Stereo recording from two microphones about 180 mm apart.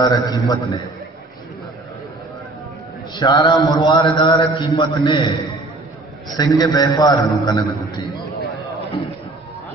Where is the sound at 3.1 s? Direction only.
20° left (ahead or behind).